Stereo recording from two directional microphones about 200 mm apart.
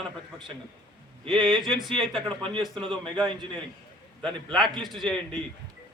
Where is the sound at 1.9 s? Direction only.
Centre (ahead or behind).